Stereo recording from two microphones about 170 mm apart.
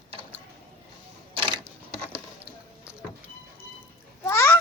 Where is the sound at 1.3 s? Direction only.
30° right (ahead or behind).